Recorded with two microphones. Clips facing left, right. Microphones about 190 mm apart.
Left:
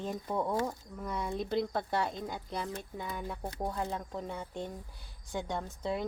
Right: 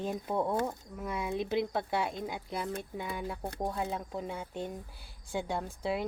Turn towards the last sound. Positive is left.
turn(degrees=-5)  # may be behind; listen again after turning